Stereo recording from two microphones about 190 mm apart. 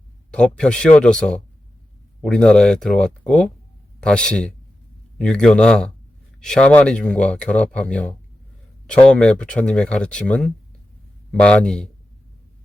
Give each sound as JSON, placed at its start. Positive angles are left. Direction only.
{"t": 0.3, "sound": "speech", "side_deg": 5}